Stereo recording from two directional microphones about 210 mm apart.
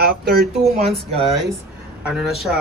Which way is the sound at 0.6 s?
30° right (ahead or behind).